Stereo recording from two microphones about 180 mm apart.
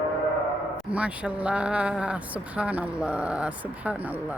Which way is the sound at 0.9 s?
5° right (ahead or behind).